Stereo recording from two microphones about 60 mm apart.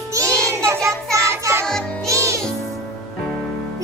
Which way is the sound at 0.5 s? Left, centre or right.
Right.